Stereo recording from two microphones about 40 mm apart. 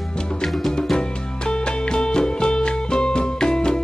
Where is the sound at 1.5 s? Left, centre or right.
Left.